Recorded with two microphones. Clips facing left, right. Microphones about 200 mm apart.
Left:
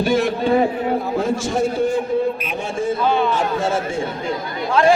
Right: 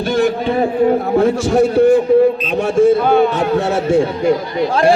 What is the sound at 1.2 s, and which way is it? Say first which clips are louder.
A man's voice: right 7 dB; 65° right (ahead or behind).